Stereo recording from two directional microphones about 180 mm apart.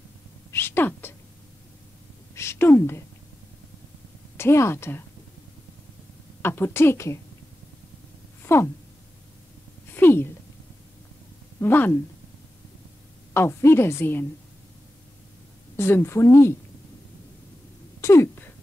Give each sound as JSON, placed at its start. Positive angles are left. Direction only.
{"t": 0.5, "sound": "a sound", "side_deg": 15}
{"t": 2.3, "sound": "a woman's voice", "side_deg": 15}
{"t": 4.4, "sound": "a woman's voice", "side_deg": 15}
{"t": 6.4, "sound": "a woman's voice", "side_deg": 10}
{"t": 8.5, "sound": "a woman's voice", "side_deg": 15}
{"t": 9.9, "sound": "a sound", "side_deg": 10}
{"t": 11.6, "sound": "a woman's voice", "side_deg": 10}
{"t": 13.3, "sound": "a woman's voice", "side_deg": 15}
{"t": 15.7, "sound": "a woman's voice", "side_deg": 15}
{"t": 18.0, "sound": "a sound", "side_deg": 15}